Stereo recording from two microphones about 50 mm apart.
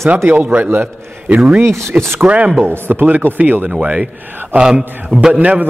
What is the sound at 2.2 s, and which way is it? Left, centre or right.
Speech, right.